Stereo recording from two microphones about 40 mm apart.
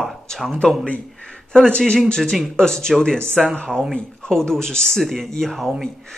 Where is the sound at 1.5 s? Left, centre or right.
Left.